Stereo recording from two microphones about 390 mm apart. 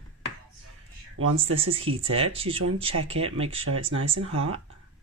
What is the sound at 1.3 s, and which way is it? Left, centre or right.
Speech, centre.